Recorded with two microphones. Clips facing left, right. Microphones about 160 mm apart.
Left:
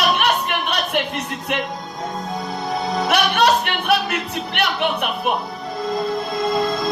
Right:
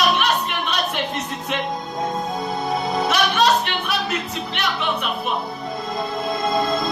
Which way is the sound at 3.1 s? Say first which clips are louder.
Left 2 dB; 60° left (ahead or behind).